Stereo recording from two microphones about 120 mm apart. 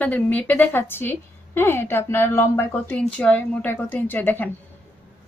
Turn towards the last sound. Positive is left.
turn(degrees=15)  # may be behind; listen again after turning